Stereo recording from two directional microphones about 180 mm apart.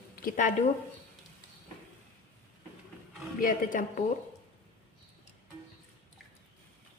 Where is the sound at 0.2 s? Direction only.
50° left (ahead or behind).